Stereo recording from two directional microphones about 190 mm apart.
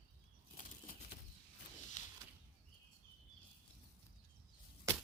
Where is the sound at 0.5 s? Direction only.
45° left (ahead or behind).